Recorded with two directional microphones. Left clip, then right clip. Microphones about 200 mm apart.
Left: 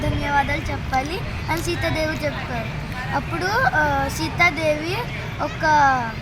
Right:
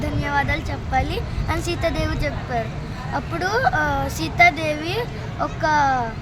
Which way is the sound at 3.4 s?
20° right (ahead or behind).